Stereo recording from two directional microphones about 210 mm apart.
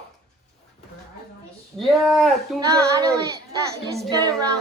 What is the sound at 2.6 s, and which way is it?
Speech, 15° right (ahead or behind).